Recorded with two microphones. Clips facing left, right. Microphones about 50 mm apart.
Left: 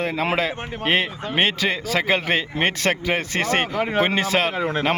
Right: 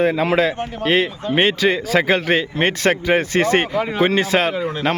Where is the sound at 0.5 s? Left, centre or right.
Left.